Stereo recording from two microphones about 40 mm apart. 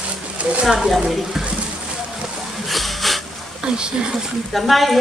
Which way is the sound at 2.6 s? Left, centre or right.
Centre.